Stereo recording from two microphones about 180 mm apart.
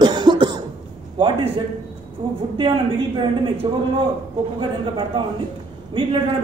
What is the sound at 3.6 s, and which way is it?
A man's voice, 25° right (ahead or behind).